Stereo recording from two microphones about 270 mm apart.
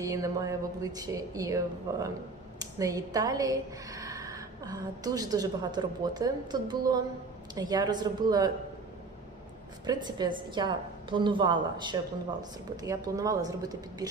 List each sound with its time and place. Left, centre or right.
0.0 s a woman's voice: centre
9.8 s a woman's voice: centre